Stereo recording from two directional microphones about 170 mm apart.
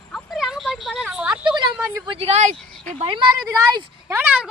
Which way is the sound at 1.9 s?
30° right (ahead or behind).